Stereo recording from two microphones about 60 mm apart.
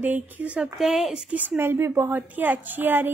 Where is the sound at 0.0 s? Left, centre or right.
Right.